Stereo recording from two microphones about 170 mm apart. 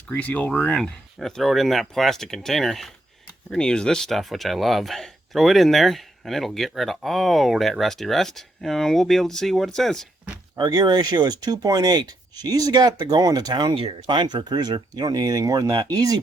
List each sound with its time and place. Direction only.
0.1 s speech: 10° left (ahead or behind)
10.6 s speech: 25° right (ahead or behind)